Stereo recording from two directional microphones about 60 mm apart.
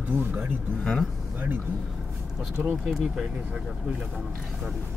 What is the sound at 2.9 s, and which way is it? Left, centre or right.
Speech, centre.